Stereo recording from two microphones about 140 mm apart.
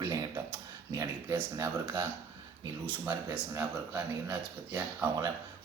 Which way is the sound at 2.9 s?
10° right (ahead or behind).